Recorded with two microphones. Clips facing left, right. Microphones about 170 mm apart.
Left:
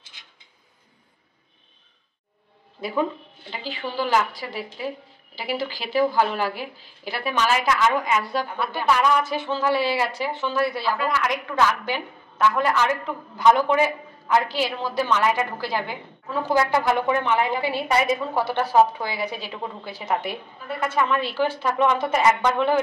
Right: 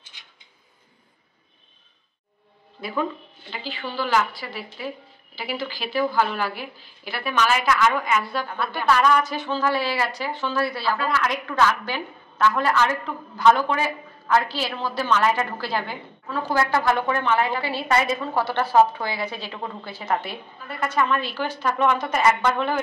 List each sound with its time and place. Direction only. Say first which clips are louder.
3.7 s a woman's voice: left 1 dB; 15° left (ahead or behind)
5.9 s a woman's voice: left 2 dB; 15° left (ahead or behind)
7.2 s a woman's voice: even; 25° left (ahead or behind)